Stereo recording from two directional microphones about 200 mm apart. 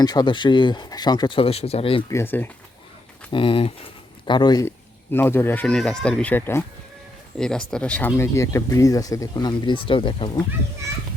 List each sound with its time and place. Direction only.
0.0 s speech: 20° left (ahead or behind)
2.0 s speech: 10° left (ahead or behind)
3.3 s speech: 25° left (ahead or behind)